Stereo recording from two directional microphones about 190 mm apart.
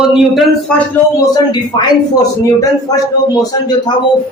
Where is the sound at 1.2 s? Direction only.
20° left (ahead or behind).